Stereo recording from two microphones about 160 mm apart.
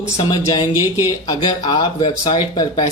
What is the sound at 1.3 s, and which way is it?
Speech, 25° left (ahead or behind).